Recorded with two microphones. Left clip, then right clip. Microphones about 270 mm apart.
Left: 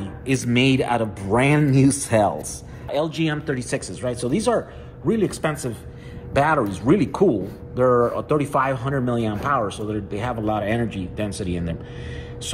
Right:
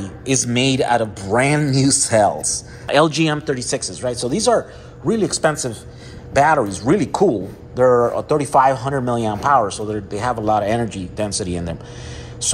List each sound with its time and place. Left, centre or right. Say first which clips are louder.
0.0 s speech: right 4 dB; centre
2.4 s speech: right 10 dB; right
3.4 s speech: right 4 dB; centre